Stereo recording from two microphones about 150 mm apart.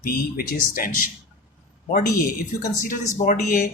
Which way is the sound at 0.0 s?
80° left.